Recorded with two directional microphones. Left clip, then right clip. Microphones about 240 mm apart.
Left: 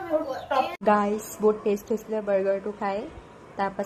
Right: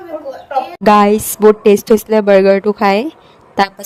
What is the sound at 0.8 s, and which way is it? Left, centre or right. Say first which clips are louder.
Speech: right 17 dB; right.